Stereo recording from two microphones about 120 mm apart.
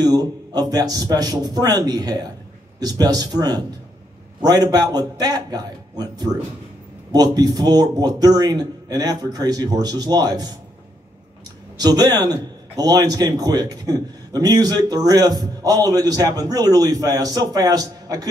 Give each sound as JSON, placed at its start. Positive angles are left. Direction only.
{"t": 0.1, "sound": "a man's voice", "side_deg": -35}
{"t": 11.8, "sound": "a man's voice", "side_deg": -35}